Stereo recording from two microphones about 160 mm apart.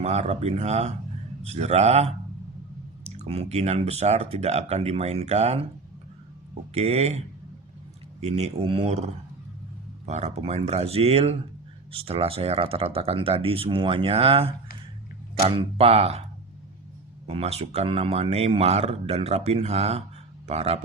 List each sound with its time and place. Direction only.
0.0 s speech: 45° right (ahead or behind)
6.7 s speech: 40° right (ahead or behind)
8.2 s speech: 40° right (ahead or behind)
10.1 s speech: 45° right (ahead or behind)
17.2 s speech: 40° right (ahead or behind)